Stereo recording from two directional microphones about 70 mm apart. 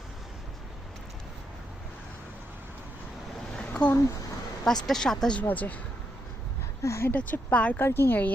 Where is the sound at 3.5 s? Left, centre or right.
Centre.